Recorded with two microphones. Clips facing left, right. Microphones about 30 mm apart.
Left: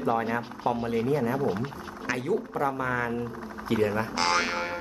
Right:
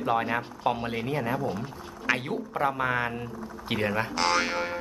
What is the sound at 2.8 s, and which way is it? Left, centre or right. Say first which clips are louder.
Speech: right 1 dB; right.